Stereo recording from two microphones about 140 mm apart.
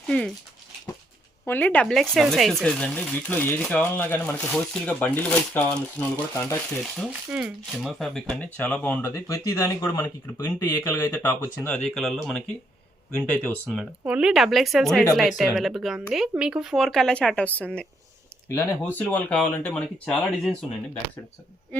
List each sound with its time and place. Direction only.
0.1 s speech: 5° left (ahead or behind)
1.5 s speech: 10° left (ahead or behind)
7.1 s speech: 5° right (ahead or behind); by 13.8 s 10° left (ahead or behind)
14.0 s speech: 5° right (ahead or behind)